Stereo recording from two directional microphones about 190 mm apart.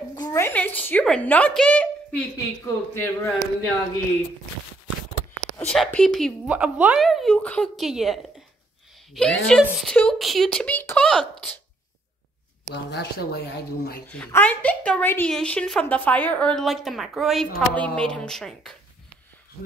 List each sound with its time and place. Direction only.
0.1 s a woman's voice: 15° left (ahead or behind)
5.7 s a woman's voice: 5° left (ahead or behind)
12.7 s speech: 60° left (ahead or behind)
14.1 s a woman's voice: 5° left (ahead or behind)